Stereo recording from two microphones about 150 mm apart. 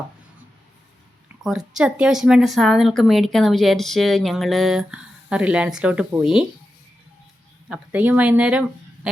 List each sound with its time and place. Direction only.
1.5 s a woman's voice: 5° right (ahead or behind)
7.7 s speech: 10° right (ahead or behind)